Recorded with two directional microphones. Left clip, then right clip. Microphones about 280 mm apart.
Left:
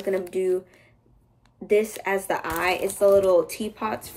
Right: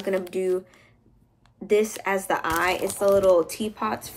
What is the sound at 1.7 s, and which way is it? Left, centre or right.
Speech, centre.